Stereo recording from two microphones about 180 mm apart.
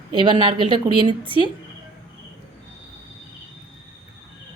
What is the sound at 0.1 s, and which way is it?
A woman's voice, 25° right (ahead or behind).